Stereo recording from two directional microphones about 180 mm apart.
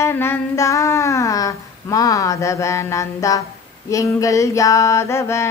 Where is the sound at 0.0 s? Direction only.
15° left (ahead or behind).